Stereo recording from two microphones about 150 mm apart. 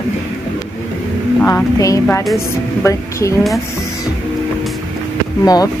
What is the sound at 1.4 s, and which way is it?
A woman's voice, 20° left (ahead or behind).